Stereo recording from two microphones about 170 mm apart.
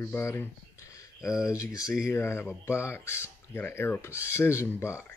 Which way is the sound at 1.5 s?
20° left (ahead or behind).